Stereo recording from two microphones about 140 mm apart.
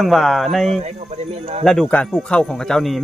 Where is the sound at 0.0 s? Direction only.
Centre (ahead or behind).